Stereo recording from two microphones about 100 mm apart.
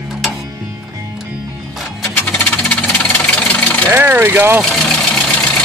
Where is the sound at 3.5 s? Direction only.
15° left (ahead or behind).